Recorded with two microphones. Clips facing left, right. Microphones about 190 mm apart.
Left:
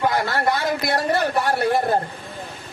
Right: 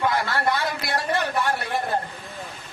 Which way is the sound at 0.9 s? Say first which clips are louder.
Left 1 dB; 40° left (ahead or behind).